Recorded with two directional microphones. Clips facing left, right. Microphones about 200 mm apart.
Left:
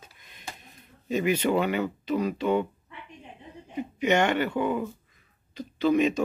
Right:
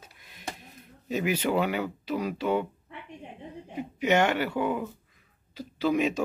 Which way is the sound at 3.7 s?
5° right (ahead or behind).